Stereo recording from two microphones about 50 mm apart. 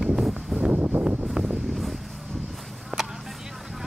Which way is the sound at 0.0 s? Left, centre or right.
Centre.